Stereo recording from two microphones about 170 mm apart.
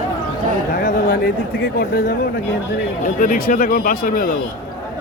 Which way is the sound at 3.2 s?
55° left (ahead or behind).